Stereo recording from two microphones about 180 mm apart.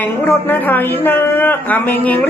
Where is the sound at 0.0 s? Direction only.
10° left (ahead or behind).